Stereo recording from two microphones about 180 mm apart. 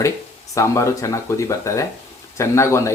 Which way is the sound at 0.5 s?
15° left (ahead or behind).